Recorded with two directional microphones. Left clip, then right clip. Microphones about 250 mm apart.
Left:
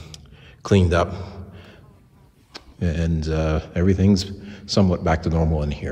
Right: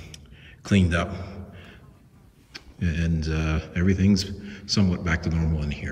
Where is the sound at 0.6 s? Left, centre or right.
Centre.